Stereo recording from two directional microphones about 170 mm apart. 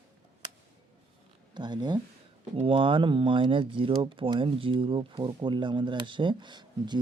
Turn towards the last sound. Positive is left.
turn(degrees=-25)  # may be behind; listen again after turning